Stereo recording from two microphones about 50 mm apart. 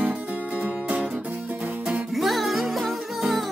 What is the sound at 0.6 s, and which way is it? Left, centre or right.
Music, right.